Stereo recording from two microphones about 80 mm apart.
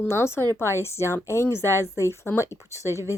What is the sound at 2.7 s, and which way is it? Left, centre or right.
Speech, right.